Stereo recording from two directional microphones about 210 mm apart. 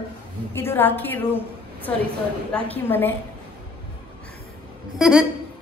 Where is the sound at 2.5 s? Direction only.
5° left (ahead or behind).